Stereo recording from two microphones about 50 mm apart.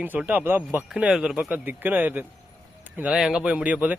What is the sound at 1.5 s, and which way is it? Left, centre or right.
Speech, right.